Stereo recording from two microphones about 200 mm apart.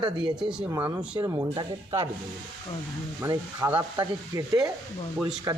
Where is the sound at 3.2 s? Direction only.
15° right (ahead or behind).